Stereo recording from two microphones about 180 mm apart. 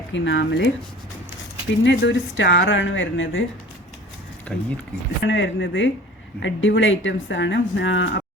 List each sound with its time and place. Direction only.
0.1 s speech: 85° left
1.8 s speech: 80° left
4.5 s speech: 5° left (ahead or behind)
5.2 s speech: 90° left